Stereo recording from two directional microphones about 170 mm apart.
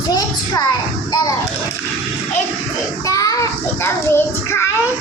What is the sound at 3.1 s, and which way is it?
A child's voice, 20° left (ahead or behind).